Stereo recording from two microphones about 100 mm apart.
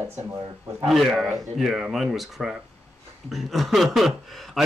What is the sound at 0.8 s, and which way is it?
Speech, centre (ahead or behind).